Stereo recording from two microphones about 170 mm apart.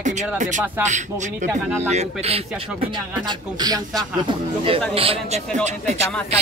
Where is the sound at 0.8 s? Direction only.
45° right (ahead or behind); by 4.0 s 20° right (ahead or behind).